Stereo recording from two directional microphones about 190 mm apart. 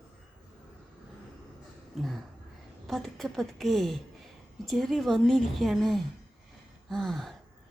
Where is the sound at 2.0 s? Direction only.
Centre (ahead or behind).